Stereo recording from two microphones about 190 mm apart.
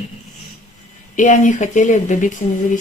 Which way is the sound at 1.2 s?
40° left (ahead or behind).